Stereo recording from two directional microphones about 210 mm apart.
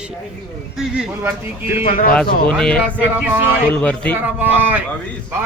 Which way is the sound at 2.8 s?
10° right (ahead or behind).